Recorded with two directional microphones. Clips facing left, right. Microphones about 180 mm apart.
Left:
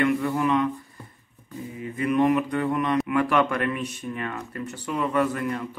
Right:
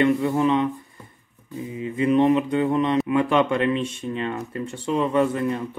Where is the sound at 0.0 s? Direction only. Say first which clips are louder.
Right 3 dB; 25° right (ahead or behind).